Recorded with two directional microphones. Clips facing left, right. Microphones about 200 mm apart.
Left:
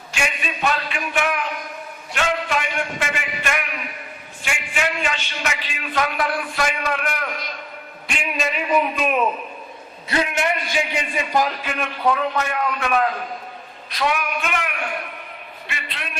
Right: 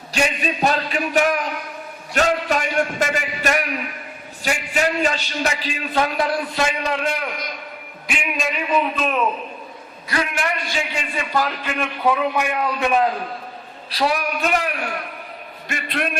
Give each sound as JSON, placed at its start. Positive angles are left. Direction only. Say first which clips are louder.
{"t": 0.1, "sound": "a man's voice", "louder": "right 5 dB", "side_deg": -35}
{"t": 8.0, "sound": "a man's voice", "louder": "even", "side_deg": 0}
{"t": 8.7, "sound": "a man's voice", "louder": "left 1 dB", "side_deg": 10}
{"t": 10.1, "sound": "a man's voice", "louder": "left 2 dB", "side_deg": 25}
{"t": 11.8, "sound": "a man's voice", "louder": "right 1 dB", "side_deg": -5}
{"t": 13.9, "sound": "a man's voice", "louder": "right 2 dB", "side_deg": -35}
{"t": 15.6, "sound": "a man's voice", "louder": "right 10 dB", "side_deg": -45}